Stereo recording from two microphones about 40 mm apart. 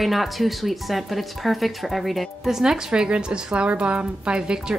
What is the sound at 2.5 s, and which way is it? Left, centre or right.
A woman's voice, centre.